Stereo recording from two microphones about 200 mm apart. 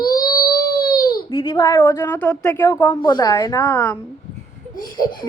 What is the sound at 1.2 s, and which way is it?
A woman's voice, 25° left (ahead or behind).